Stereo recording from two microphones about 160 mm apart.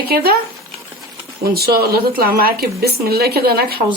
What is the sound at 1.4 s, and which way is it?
Speech, 75° right (ahead or behind).